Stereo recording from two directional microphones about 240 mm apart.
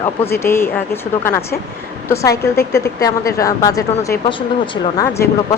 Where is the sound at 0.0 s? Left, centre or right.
Centre.